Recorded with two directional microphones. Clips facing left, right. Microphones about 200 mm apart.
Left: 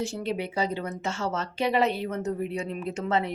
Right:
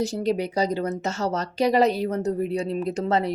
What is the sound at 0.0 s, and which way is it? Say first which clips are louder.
Speech: right 6 dB; 40° right (ahead or behind).